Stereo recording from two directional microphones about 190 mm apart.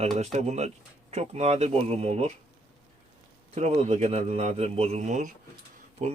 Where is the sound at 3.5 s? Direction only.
35° right (ahead or behind).